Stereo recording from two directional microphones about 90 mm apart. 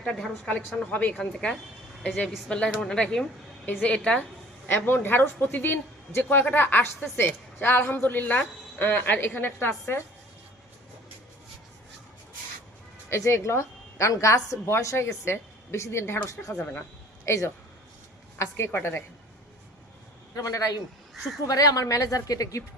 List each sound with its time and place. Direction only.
0.0 s speech: 10° left (ahead or behind)
1.1 s speech: 5° left (ahead or behind)
4.7 s a woman's voice: 25° left (ahead or behind)
13.1 s a woman's voice: 35° left (ahead or behind)
20.3 s a woman's voice: 40° left (ahead or behind)